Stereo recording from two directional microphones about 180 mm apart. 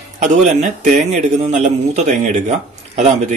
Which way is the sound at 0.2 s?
40° right (ahead or behind).